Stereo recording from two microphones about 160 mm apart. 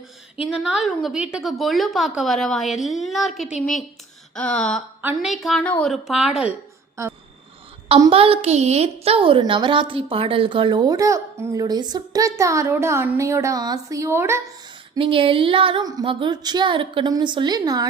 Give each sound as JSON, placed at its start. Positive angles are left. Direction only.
{"t": 0.5, "sound": "a woman's voice", "side_deg": -5}
{"t": 4.4, "sound": "a sound", "side_deg": 5}
{"t": 5.0, "sound": "a woman's voice", "side_deg": -5}
{"t": 8.1, "sound": "a woman's voice", "side_deg": -35}
{"t": 14.9, "sound": "a woman's voice", "side_deg": -35}